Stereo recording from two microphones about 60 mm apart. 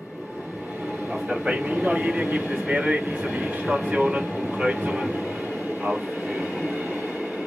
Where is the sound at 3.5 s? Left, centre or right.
Right.